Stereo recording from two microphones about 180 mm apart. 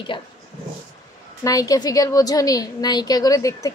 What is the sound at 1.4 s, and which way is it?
A woman's voice, 20° left (ahead or behind).